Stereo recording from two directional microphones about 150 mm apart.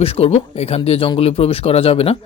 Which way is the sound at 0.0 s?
40° left (ahead or behind).